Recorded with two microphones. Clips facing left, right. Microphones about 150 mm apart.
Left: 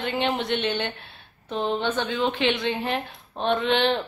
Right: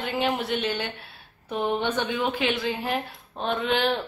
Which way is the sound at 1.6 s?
15° right (ahead or behind).